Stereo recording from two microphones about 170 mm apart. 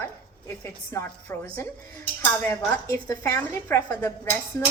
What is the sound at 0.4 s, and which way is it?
A woman's voice, 15° left (ahead or behind).